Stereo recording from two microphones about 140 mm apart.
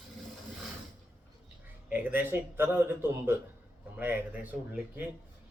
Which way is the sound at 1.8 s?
10° right (ahead or behind).